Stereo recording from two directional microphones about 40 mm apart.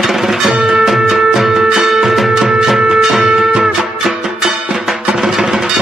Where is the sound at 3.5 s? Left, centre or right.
Centre.